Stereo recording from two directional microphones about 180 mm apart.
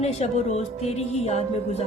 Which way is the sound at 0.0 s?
35° left (ahead or behind).